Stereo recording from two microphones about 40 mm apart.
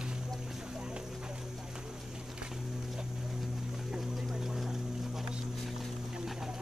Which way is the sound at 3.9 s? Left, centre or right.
Centre.